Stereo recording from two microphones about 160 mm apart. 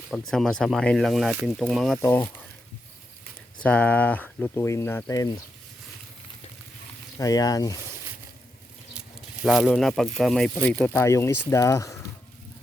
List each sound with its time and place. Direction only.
0.1 s speech: centre (ahead or behind)
2.0 s speech: 15° left (ahead or behind)
3.6 s speech: 10° left (ahead or behind)
7.2 s speech: 20° left (ahead or behind)
9.4 s speech: 5° right (ahead or behind)
11.0 s speech: 20° left (ahead or behind)